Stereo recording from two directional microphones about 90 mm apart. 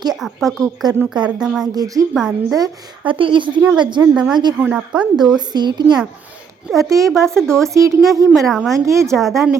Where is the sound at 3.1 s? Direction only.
70° right (ahead or behind).